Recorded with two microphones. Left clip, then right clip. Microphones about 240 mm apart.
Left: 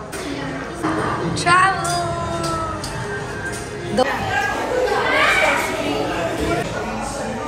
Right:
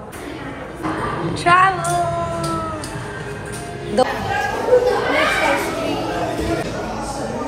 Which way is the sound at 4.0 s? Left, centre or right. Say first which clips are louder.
Right 1 dB; centre.